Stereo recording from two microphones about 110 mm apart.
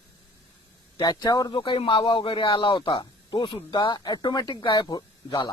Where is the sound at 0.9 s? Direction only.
40° left (ahead or behind).